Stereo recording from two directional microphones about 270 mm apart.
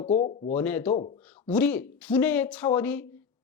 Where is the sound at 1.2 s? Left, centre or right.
Centre.